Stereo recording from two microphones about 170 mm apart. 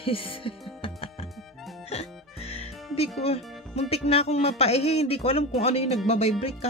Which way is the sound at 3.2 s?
35° left (ahead or behind).